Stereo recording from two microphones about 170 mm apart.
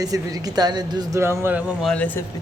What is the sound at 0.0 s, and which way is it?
Speech, 20° right (ahead or behind).